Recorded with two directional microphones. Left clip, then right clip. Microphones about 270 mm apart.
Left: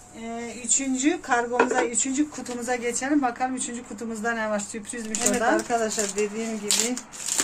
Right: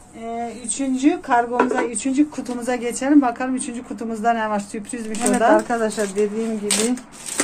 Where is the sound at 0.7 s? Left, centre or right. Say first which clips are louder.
Right 4 dB; centre.